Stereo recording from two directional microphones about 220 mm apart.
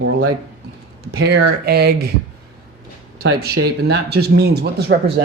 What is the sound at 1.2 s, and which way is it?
Speech, 45° right (ahead or behind).